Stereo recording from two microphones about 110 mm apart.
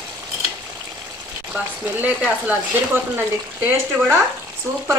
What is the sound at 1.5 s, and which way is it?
Speech, 15° right (ahead or behind).